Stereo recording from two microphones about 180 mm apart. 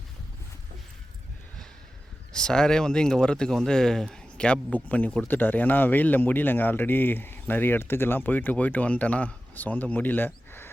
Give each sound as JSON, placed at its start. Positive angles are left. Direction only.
{"t": 2.3, "sound": "speech", "side_deg": 5}